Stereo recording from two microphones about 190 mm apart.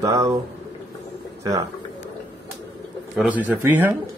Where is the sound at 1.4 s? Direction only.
15° right (ahead or behind).